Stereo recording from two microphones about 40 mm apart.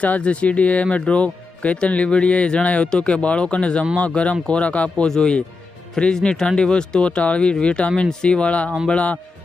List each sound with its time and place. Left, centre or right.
0.0 s speech: left
2.9 s speech: left
5.0 s speech: centre